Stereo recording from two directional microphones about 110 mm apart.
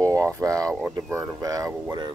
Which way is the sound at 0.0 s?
30° right (ahead or behind).